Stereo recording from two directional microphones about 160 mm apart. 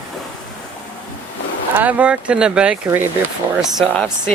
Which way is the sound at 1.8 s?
10° right (ahead or behind).